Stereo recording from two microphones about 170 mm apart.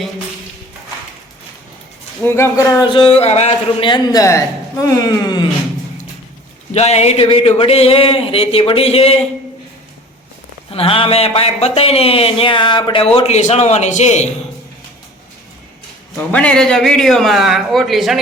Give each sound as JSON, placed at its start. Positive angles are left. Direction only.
{"t": 2.2, "sound": "speech", "side_deg": 15}
{"t": 2.9, "sound": "a man's voice", "side_deg": 35}
{"t": 6.7, "sound": "speech", "side_deg": 40}
{"t": 10.7, "sound": "speech", "side_deg": 35}
{"t": 16.1, "sound": "a man's voice", "side_deg": 10}